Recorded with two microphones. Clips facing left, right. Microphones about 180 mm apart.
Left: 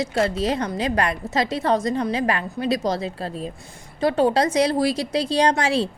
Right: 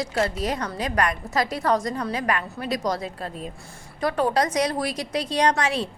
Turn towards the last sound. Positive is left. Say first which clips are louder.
# left 3 dB
turn(degrees=30)  # may be behind; listen again after turning